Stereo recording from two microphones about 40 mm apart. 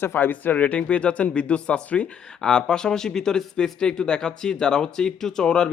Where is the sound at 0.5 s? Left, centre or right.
Left.